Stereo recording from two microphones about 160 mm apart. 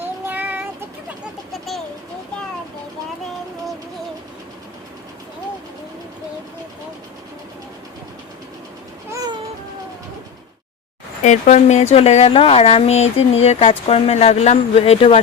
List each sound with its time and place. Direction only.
0.3 s child singing: 10° right (ahead or behind)
9.0 s cat: 20° right (ahead or behind)
11.2 s speech: 45° left (ahead or behind)